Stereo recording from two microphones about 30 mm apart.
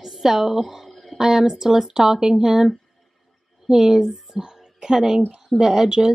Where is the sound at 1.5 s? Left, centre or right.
Centre.